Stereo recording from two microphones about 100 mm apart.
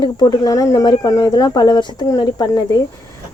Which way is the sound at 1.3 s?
45° left (ahead or behind).